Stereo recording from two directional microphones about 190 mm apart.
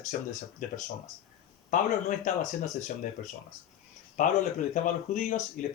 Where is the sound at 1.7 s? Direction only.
40° left (ahead or behind).